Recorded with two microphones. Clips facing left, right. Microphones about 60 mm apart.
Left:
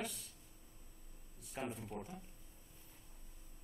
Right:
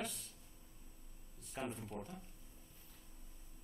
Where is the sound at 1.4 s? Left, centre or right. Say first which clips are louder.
Even; centre.